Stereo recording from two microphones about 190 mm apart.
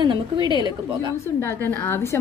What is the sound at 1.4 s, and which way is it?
Speech, 10° left (ahead or behind).